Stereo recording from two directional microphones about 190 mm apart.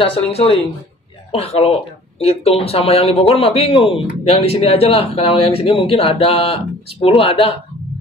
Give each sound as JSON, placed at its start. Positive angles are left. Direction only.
{"t": 0.0, "sound": "speech", "side_deg": 30}